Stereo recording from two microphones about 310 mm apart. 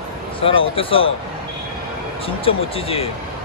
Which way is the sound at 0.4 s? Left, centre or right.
Centre.